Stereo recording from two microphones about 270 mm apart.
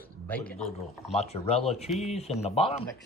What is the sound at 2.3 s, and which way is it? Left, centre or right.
Speech, left.